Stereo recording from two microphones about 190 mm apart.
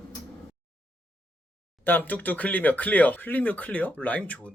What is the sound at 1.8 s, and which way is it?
Speech, 10° left (ahead or behind).